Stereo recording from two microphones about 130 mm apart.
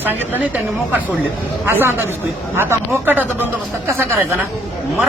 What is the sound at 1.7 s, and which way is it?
A man's voice, 15° right (ahead or behind).